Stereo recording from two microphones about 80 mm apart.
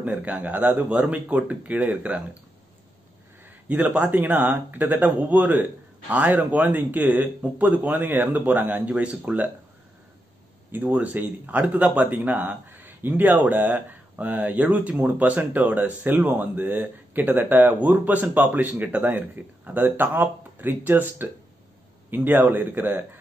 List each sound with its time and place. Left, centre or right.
0.1 s a man's voice: centre
3.7 s a man's voice: centre
10.7 s a man's voice: right